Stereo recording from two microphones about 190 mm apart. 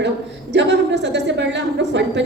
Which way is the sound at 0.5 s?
65° right (ahead or behind).